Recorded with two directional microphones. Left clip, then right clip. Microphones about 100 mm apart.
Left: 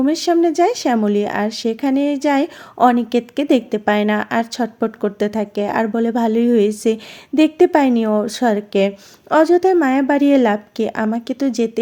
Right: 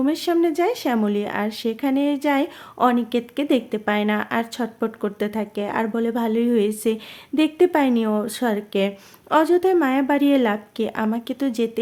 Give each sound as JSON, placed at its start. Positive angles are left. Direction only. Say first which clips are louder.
{"t": 0.0, "sound": "a woman's voice", "louder": "left 5 dB", "side_deg": 30}